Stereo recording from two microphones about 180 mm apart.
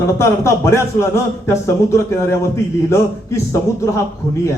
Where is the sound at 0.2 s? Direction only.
15° left (ahead or behind).